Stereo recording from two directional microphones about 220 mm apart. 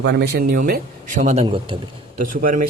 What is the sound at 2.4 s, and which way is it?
Speech, 40° right (ahead or behind).